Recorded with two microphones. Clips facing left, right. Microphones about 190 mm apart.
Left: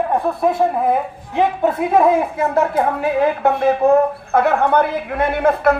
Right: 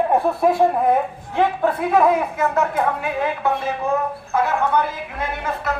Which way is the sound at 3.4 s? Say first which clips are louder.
Left 7 dB; 60° left (ahead or behind).